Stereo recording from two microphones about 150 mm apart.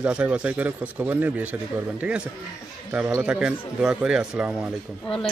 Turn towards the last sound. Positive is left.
turn(degrees=-5)  # may be behind; listen again after turning